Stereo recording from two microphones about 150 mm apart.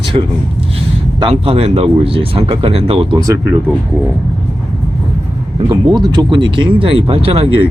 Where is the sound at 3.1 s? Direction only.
20° right (ahead or behind).